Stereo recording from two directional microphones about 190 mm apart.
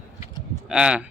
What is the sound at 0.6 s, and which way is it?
Speech, 5° right (ahead or behind).